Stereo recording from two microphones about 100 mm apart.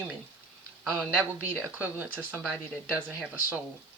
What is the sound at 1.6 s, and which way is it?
Speech, 15° right (ahead or behind).